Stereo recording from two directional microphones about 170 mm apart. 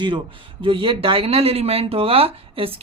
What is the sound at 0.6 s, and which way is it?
Speech, 30° right (ahead or behind).